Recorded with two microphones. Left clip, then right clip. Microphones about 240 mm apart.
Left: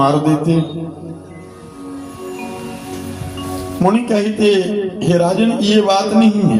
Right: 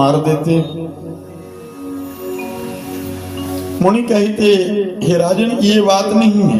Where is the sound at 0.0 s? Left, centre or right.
Right.